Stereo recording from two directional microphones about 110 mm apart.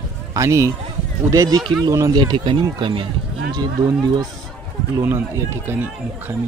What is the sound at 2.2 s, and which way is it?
Speech, 45° right (ahead or behind).